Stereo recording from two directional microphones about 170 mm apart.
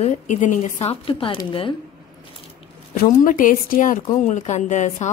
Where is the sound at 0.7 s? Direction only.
30° left (ahead or behind).